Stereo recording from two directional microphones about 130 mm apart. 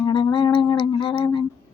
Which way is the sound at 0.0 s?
40° left (ahead or behind).